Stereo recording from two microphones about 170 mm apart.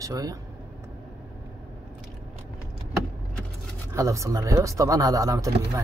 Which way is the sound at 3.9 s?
20° right (ahead or behind).